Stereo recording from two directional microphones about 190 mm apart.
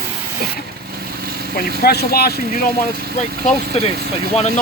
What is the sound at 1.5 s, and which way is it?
Speech, 55° left (ahead or behind).